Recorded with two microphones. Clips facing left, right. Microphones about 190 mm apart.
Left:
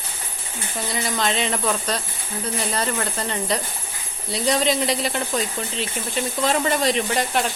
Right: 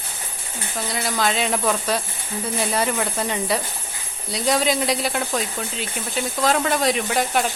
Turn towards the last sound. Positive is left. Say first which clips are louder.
# right 1 dB
turn(degrees=0)  # may be behind; listen again after turning